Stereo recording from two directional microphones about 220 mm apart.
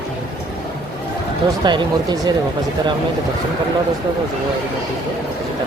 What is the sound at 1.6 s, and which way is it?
Speech, 20° right (ahead or behind).